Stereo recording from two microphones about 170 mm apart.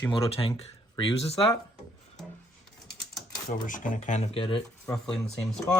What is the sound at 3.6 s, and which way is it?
Speech, 50° left (ahead or behind).